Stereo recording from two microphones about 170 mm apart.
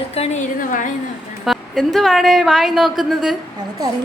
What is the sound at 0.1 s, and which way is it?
Speech, 35° left (ahead or behind).